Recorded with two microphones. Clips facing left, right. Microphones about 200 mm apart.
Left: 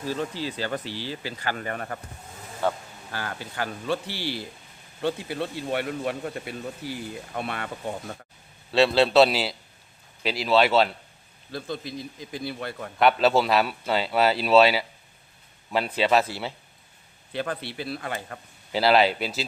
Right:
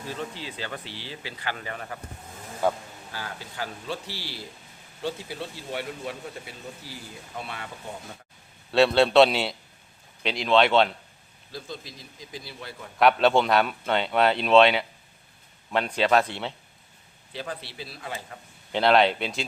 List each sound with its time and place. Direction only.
0.3 s speech: 40° left (ahead or behind)
2.6 s speech: 10° right (ahead or behind)
3.1 s speech: 60° left (ahead or behind)
8.7 s a man's voice: centre (ahead or behind)
11.5 s speech: 60° left (ahead or behind)
13.0 s a man's voice: centre (ahead or behind)
17.3 s speech: 60° left (ahead or behind)
18.7 s a man's voice: 5° left (ahead or behind)